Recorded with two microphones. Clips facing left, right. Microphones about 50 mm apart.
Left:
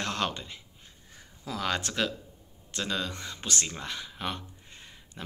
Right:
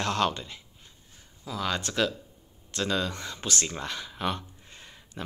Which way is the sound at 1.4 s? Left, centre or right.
Left.